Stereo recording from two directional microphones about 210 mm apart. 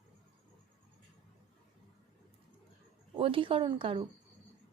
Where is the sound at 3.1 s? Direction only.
25° right (ahead or behind).